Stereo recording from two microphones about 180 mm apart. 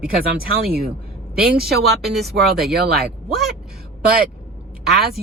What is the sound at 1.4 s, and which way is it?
Speech, 60° right (ahead or behind).